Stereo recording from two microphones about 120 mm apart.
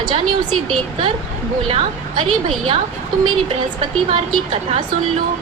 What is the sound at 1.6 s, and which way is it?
Speech, 50° right (ahead or behind).